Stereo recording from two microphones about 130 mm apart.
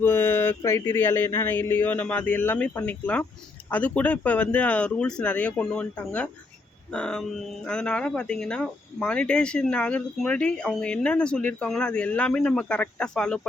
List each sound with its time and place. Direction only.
0.0 s speech: 15° left (ahead or behind)